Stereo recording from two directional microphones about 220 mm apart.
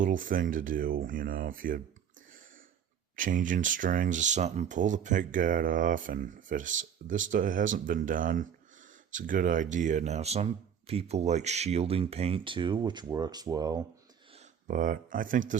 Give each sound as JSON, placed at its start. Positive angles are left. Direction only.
{"t": 0.0, "sound": "speech", "side_deg": -35}
{"t": 3.2, "sound": "speech", "side_deg": -35}
{"t": 14.3, "sound": "speech", "side_deg": -35}